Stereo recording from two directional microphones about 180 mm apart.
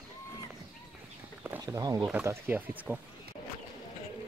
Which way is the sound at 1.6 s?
20° right (ahead or behind).